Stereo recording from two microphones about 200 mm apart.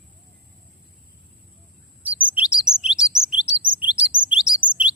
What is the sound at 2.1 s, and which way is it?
Chirp, 5° right (ahead or behind).